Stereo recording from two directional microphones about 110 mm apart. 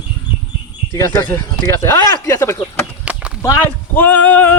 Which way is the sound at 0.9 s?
35° left (ahead or behind).